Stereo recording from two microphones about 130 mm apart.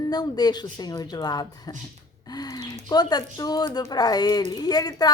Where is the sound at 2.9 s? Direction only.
30° left (ahead or behind).